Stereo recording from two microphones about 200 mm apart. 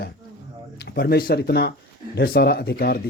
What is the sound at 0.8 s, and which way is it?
Speech, 55° left (ahead or behind).